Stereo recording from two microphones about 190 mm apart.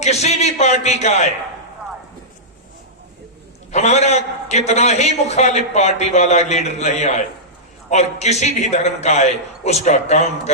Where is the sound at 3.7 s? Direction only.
35° left (ahead or behind).